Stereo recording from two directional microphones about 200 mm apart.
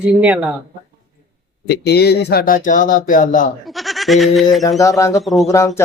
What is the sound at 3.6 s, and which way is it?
Speech, centre (ahead or behind).